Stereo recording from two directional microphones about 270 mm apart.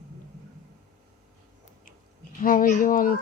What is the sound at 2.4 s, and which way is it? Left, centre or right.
Speech, left.